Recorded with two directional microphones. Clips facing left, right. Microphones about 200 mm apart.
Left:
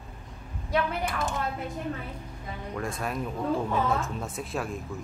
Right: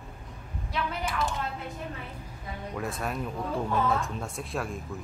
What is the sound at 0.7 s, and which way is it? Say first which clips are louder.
Speech: left 3 dB; 55° left (ahead or behind).